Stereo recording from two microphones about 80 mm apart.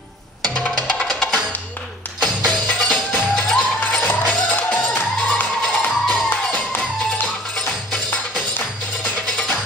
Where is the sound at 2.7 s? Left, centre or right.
Centre.